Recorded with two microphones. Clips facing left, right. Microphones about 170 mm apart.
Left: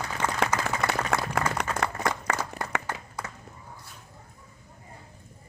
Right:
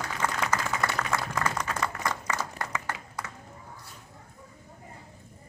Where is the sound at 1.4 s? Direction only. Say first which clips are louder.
Left 2 dB; 65° left (ahead or behind).